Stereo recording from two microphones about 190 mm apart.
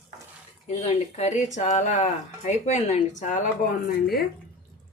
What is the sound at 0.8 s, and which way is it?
Speech, 35° left (ahead or behind).